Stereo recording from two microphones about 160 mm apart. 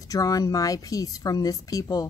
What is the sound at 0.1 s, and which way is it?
Speech, 20° left (ahead or behind).